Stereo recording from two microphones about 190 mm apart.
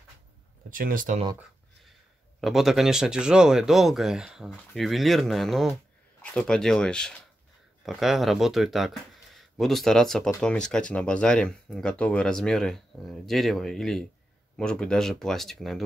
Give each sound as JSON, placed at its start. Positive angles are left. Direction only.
{"t": 0.7, "sound": "speech", "side_deg": -45}
{"t": 2.4, "sound": "speech", "side_deg": 0}